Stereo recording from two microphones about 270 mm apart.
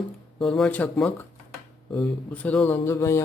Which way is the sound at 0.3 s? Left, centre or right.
Centre.